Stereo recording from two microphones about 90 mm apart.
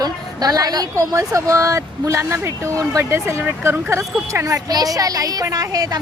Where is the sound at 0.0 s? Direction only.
45° right (ahead or behind).